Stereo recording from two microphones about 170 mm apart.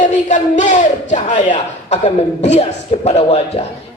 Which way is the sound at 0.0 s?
45° left (ahead or behind).